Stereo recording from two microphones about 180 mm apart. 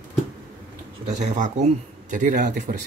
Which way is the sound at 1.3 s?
40° right (ahead or behind).